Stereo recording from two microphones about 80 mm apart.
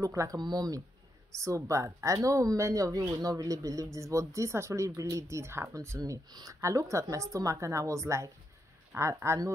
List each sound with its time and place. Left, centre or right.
0.0 s speech: right
0.4 s speech: right
1.3 s speech: right